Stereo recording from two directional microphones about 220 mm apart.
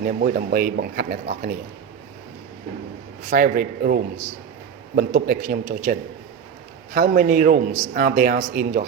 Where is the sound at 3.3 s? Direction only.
40° right (ahead or behind).